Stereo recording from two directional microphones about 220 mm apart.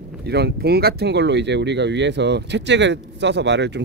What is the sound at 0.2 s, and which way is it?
Speech, 50° right (ahead or behind).